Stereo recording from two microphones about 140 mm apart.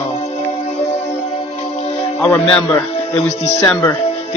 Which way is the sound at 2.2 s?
15° left (ahead or behind).